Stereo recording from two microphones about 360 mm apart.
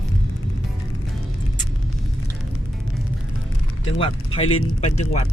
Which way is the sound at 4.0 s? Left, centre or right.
Centre.